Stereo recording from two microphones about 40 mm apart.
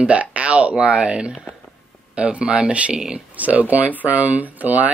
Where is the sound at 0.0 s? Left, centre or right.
Right.